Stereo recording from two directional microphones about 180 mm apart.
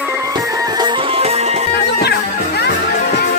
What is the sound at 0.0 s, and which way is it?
Music, 15° right (ahead or behind).